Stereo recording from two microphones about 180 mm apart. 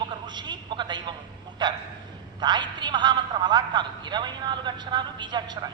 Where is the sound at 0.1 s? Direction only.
25° right (ahead or behind).